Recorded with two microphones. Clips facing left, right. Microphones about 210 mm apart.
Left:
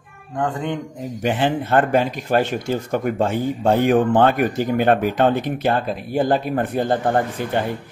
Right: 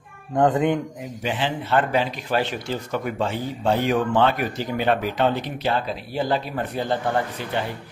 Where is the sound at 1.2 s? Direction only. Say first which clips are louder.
Left 6 dB; 50° left (ahead or behind).